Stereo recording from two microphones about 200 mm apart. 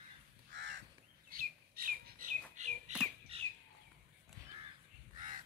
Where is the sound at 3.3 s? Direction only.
30° right (ahead or behind).